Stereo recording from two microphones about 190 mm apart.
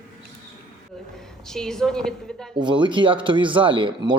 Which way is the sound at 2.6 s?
25° right (ahead or behind).